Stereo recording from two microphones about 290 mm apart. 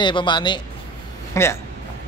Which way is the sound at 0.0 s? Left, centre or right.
Centre.